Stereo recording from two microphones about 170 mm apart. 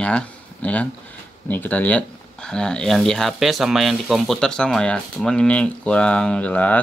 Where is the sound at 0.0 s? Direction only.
5° left (ahead or behind).